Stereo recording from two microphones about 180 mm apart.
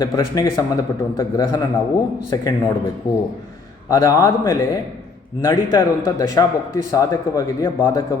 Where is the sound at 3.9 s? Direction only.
20° left (ahead or behind).